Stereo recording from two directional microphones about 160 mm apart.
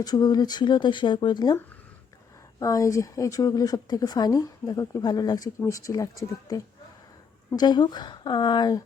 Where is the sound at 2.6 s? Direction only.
20° left (ahead or behind).